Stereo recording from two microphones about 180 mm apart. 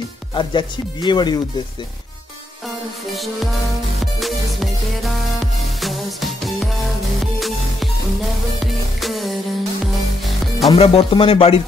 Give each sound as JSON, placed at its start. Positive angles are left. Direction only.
{"t": 0.3, "sound": "speech", "side_deg": 25}
{"t": 4.0, "sound": "music", "side_deg": 0}
{"t": 9.0, "sound": "music", "side_deg": 0}
{"t": 10.7, "sound": "speech", "side_deg": 35}